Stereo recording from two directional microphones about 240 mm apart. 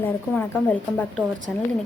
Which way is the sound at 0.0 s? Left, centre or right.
Centre.